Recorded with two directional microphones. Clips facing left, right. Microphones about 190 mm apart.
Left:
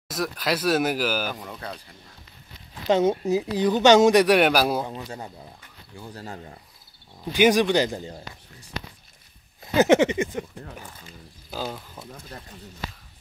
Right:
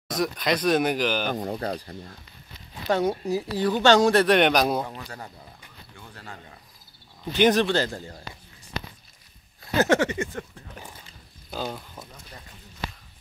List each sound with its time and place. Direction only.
0.1 s speech: 5° left (ahead or behind)
1.3 s speech: 35° right (ahead or behind)
2.9 s speech: 20° left (ahead or behind); by 4.8 s 5° left (ahead or behind)
4.8 s a sound: 20° left (ahead or behind)
5.9 s speech: 35° left (ahead or behind)
7.3 s speech: 10° left (ahead or behind)
9.8 s a sound: 20° left (ahead or behind)
11.5 s speech: 5° left (ahead or behind)